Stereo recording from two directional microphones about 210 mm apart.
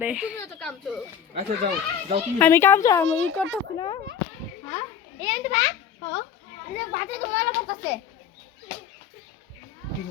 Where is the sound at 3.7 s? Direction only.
25° left (ahead or behind).